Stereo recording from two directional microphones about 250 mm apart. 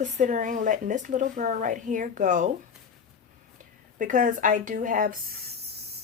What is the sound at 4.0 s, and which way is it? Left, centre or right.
Speech, right.